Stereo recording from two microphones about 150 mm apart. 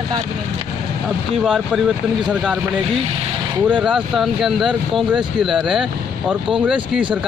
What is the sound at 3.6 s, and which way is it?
Speech, 10° right (ahead or behind).